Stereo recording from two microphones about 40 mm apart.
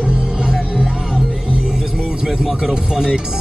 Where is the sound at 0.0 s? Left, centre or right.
Right.